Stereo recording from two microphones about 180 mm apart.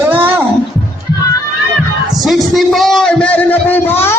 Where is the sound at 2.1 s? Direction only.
Centre (ahead or behind).